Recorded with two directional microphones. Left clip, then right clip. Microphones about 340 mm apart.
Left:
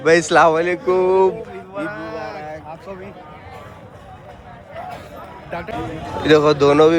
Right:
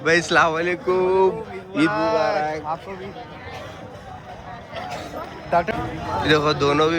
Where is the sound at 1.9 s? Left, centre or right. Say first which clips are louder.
Right 9 dB; right.